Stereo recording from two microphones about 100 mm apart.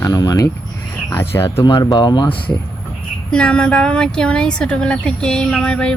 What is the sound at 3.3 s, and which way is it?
A woman's voice, 10° left (ahead or behind).